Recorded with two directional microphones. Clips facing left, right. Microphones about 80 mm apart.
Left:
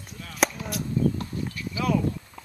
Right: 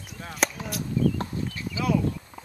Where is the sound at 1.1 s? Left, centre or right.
Right.